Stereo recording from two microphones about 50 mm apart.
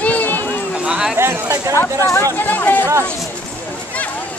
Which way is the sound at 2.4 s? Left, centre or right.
Left.